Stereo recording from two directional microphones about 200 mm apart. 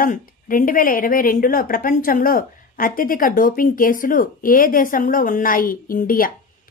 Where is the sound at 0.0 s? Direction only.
45° left (ahead or behind).